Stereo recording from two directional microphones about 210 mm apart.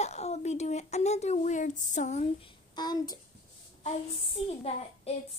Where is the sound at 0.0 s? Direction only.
30° left (ahead or behind).